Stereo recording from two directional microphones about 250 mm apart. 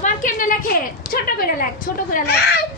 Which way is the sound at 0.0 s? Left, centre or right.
Left.